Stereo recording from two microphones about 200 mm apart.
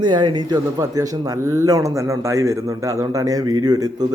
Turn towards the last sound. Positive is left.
turn(degrees=-20)  # may be behind; listen again after turning